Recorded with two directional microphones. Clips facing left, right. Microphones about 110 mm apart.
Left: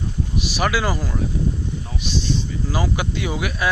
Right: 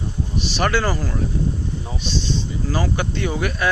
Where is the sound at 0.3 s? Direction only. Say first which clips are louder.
Right 1 dB; 10° left (ahead or behind).